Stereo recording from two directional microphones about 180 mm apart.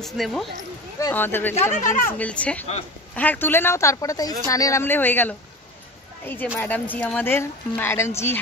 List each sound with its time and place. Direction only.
0.0 s speech: centre (ahead or behind)
0.9 s speech: 15° left (ahead or behind)
1.7 s speech: 45° left (ahead or behind)
2.0 s speech: 10° left (ahead or behind)